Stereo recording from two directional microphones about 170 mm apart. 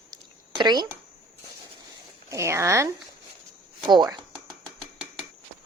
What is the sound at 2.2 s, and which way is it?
Speech, 15° right (ahead or behind).